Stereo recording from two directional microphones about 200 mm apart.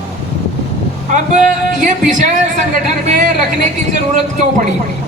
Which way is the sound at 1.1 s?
40° right (ahead or behind).